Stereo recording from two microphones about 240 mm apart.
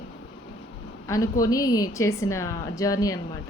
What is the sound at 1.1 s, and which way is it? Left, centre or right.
A woman's voice, centre.